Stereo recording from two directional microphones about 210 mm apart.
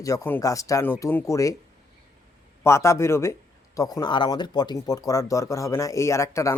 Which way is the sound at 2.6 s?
15° left (ahead or behind).